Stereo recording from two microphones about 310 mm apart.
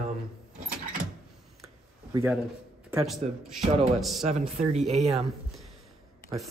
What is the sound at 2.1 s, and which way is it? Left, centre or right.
A man's voice, centre.